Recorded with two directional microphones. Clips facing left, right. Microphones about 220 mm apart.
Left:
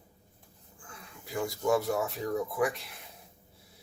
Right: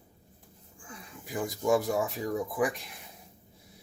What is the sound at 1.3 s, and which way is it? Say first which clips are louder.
Speech: right 1 dB; 15° right (ahead or behind).